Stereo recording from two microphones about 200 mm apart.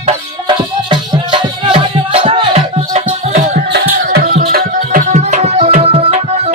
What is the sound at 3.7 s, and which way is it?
Music, 55° right (ahead or behind).